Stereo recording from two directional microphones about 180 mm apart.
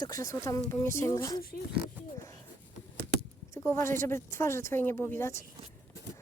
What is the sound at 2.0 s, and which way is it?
Speech, 10° right (ahead or behind).